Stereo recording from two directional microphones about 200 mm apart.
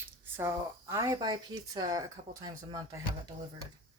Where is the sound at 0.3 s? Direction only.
15° right (ahead or behind).